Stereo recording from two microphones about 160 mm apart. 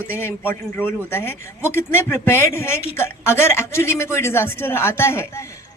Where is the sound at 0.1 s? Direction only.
15° left (ahead or behind).